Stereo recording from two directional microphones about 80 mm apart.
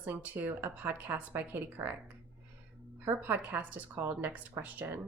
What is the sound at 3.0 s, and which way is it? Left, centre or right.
A woman's voice, right.